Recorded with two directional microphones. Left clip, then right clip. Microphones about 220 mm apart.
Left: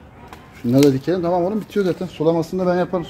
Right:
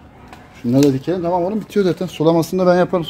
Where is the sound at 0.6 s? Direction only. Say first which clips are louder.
Even; centre (ahead or behind).